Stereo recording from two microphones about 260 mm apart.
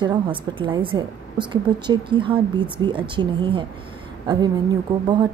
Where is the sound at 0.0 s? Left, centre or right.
Centre.